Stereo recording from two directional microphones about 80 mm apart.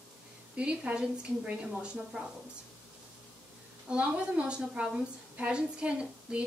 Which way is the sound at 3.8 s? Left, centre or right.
Centre.